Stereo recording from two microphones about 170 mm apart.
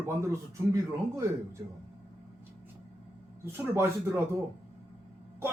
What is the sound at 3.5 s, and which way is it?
Speech, 15° right (ahead or behind).